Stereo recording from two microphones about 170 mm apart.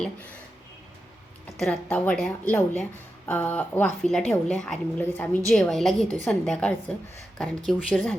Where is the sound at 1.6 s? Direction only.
5° left (ahead or behind).